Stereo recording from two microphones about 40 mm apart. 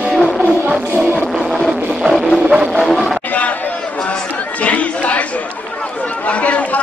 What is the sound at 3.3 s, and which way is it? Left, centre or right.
Chatter, left.